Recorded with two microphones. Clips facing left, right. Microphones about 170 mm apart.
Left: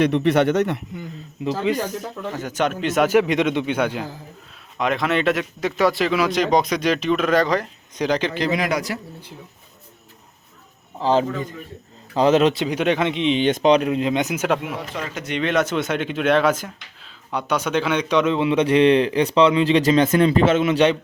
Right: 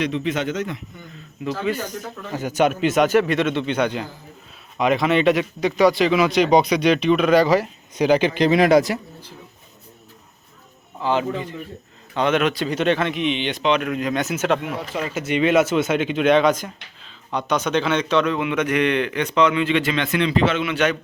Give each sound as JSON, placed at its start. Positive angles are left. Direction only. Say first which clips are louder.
{"t": 0.0, "sound": "a man's voice", "louder": "left 6 dB", "side_deg": 65}
{"t": 2.3, "sound": "a man's voice", "louder": "right 4 dB", "side_deg": -10}
{"t": 3.1, "sound": "a man's voice", "louder": "left 1 dB", "side_deg": 15}
{"t": 8.5, "sound": "a man's voice", "louder": "right 8 dB", "side_deg": -30}
{"t": 11.0, "sound": "a man's voice", "louder": "left 2 dB", "side_deg": 35}
{"t": 12.6, "sound": "a man's voice", "louder": "even", "side_deg": 10}
{"t": 13.2, "sound": "a man's voice", "louder": "left 7 dB", "side_deg": 40}
{"t": 14.3, "sound": "a man's voice", "louder": "right 1 dB", "side_deg": 10}
{"t": 14.9, "sound": "speech", "louder": "right 6 dB", "side_deg": -10}
{"t": 18.3, "sound": "a man's voice", "louder": "left 4 dB", "side_deg": 30}